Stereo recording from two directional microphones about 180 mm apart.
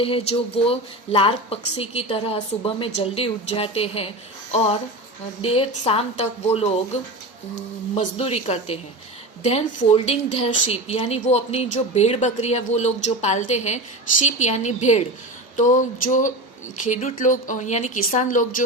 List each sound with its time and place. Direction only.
0.0 s a woman's voice: 30° left (ahead or behind)